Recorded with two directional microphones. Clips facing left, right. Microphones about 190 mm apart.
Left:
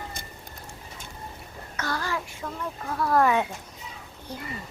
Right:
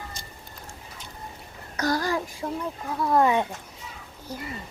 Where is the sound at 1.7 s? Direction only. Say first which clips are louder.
Right 5 dB; 40° right (ahead or behind).